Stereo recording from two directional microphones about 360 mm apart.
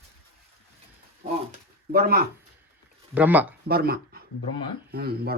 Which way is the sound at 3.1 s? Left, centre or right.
Centre.